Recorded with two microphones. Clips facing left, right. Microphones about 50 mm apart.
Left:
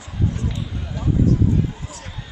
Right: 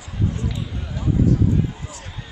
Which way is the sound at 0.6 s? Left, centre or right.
Centre.